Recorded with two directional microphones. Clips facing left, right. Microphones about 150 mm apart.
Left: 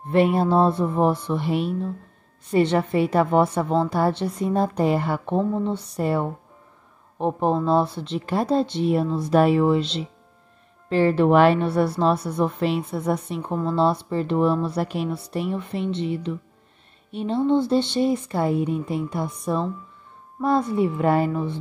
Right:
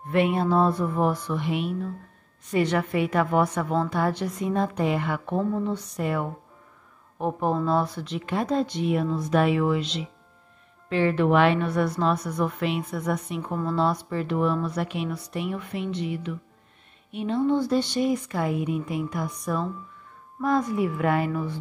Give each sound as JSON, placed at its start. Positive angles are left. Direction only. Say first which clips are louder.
{"t": 0.1, "sound": "a woman's voice", "louder": "left 3 dB", "side_deg": 35}